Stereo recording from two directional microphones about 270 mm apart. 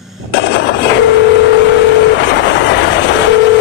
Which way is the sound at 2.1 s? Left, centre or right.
Left.